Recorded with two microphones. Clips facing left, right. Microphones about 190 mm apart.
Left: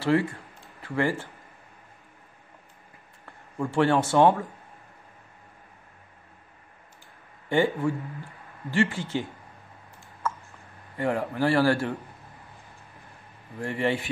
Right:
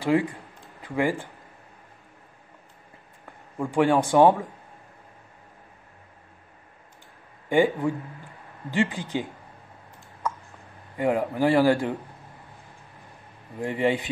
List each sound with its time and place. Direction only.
0.0 s a man's voice: 15° right (ahead or behind)
3.5 s a man's voice: 15° right (ahead or behind)
7.4 s a man's voice: 15° right (ahead or behind)
10.2 s a sound: 15° right (ahead or behind)
11.0 s a man's voice: 15° right (ahead or behind)
13.6 s a man's voice: 15° right (ahead or behind)